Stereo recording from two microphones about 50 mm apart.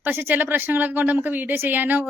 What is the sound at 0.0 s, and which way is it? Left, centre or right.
A woman's voice, right.